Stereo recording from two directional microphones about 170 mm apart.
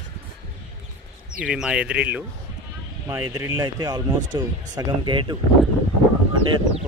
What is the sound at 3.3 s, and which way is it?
Speech, 20° right (ahead or behind).